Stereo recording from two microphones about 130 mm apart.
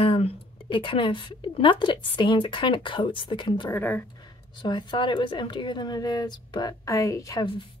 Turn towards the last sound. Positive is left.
turn(degrees=40)  # may be behind; listen again after turning